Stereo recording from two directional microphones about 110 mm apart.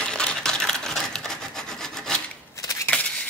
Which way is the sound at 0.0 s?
10° left (ahead or behind).